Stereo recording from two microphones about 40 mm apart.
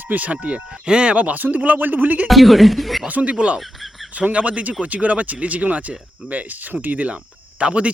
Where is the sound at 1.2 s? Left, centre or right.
Right.